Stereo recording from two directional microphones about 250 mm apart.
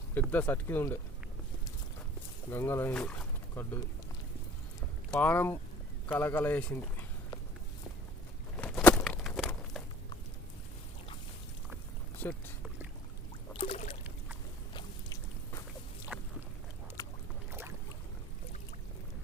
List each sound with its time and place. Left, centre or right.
0.1 s speech: centre
2.5 s speech: centre
5.1 s speech: centre
8.5 s a sound: centre
12.2 s boat: centre
13.5 s rowboat: left
14.7 s a sound: centre
16.1 s boat: centre
17.0 s boat: centre